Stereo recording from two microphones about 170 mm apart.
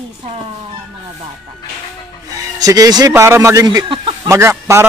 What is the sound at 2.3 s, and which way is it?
Speech, 20° right (ahead or behind).